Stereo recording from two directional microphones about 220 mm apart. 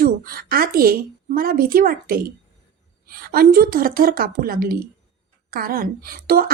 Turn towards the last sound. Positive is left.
turn(degrees=-40)  # may be behind; listen again after turning